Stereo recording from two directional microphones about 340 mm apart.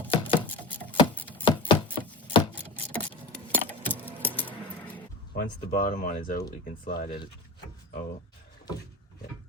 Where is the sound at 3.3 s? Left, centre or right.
Centre.